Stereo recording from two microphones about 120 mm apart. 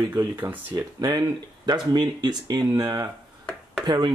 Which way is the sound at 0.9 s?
35° right (ahead or behind).